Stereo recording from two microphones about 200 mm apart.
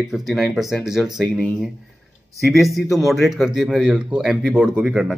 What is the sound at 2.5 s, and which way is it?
Speech, centre (ahead or behind).